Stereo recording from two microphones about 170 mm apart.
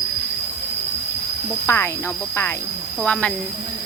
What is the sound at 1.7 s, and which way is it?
Speech, 15° left (ahead or behind).